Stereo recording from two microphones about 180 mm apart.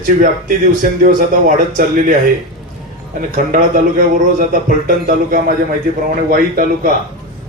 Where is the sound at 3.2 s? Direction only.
50° right (ahead or behind).